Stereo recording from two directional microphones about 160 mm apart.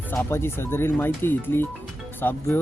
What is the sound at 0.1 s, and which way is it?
Speech, 15° left (ahead or behind).